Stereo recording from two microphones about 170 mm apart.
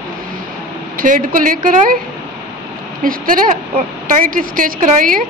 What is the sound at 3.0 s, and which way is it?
Speech, 55° right (ahead or behind).